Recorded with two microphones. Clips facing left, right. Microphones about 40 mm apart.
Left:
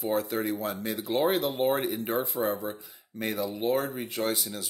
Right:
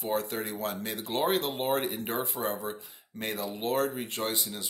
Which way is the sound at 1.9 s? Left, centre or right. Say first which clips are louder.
Left 3 dB; centre.